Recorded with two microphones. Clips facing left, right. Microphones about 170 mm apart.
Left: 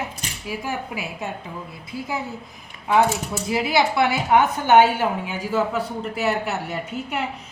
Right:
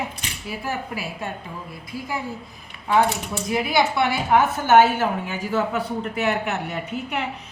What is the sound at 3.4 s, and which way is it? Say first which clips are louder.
A woman's voice: even; 25° left (ahead or behind).